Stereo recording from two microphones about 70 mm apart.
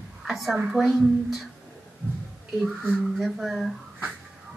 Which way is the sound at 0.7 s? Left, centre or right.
Centre.